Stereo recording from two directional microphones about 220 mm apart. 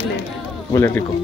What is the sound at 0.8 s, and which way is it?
Speech, 10° left (ahead or behind).